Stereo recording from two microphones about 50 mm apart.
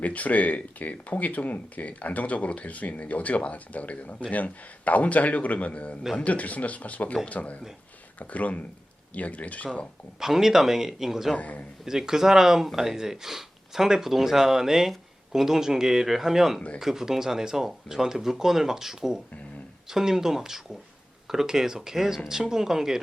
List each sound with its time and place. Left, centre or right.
0.0 s a man's voice: left
10.2 s speech: centre
11.3 s a man's voice: left
11.9 s speech: centre